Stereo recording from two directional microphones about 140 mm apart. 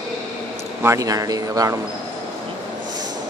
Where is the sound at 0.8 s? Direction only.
20° right (ahead or behind).